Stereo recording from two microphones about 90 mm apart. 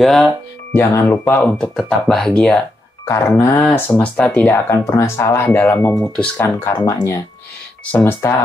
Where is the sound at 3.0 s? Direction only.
30° left (ahead or behind).